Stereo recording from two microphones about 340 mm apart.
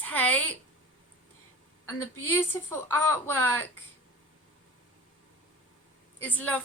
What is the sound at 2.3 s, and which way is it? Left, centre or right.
A woman's voice, centre.